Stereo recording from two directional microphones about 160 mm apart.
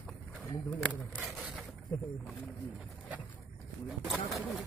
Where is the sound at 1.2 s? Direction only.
5° right (ahead or behind).